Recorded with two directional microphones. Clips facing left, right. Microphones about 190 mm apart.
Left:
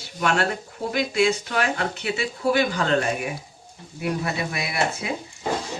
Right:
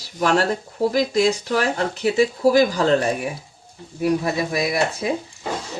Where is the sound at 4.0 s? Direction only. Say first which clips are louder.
Right 6 dB; 35° right (ahead or behind).